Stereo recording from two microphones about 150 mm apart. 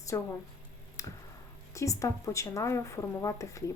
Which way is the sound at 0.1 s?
20° left (ahead or behind).